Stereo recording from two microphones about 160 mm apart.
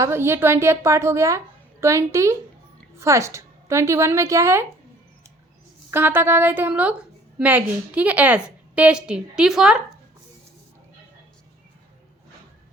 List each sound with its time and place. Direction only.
0.0 s a woman's voice: 15° right (ahead or behind)
5.9 s a woman's voice: 15° right (ahead or behind)